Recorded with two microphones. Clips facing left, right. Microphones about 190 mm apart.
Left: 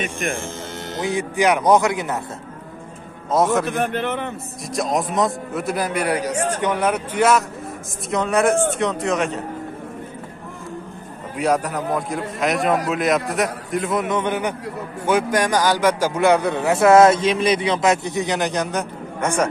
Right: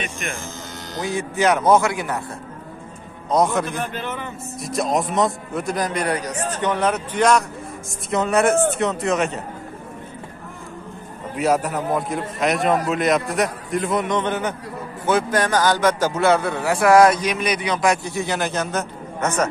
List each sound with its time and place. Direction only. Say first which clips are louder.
0.9 s a man's voice: left 2 dB; 15° left (ahead or behind)
3.3 s a man's voice: left 1 dB; centre (ahead or behind)
3.6 s a man's voice: left 5 dB; 60° left (ahead or behind)
4.7 s a man's voice: even; centre (ahead or behind)
11.3 s a man's voice: even; 5° right (ahead or behind)